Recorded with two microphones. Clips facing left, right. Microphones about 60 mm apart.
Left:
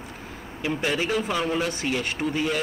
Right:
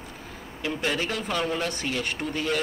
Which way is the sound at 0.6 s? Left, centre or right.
Centre.